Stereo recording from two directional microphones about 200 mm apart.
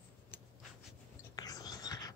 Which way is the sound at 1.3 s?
20° left (ahead or behind).